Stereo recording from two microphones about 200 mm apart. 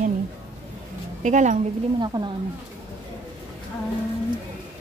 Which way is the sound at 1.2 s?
35° right (ahead or behind).